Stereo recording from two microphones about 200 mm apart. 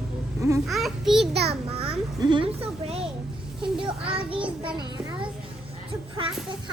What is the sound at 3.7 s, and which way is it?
Child singing, 25° right (ahead or behind).